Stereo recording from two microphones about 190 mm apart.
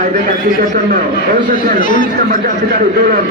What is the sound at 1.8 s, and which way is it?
Speech, 45° left (ahead or behind).